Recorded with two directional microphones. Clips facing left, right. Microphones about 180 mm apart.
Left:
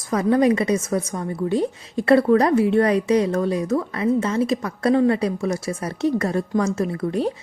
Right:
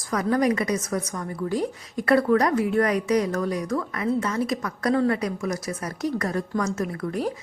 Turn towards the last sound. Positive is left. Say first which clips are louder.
# left 4 dB
turn(degrees=25)  # may be behind; listen again after turning